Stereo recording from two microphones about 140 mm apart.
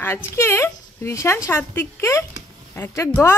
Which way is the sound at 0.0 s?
15° left (ahead or behind).